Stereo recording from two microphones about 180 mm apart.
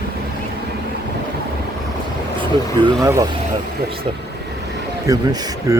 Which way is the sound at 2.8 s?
25° right (ahead or behind).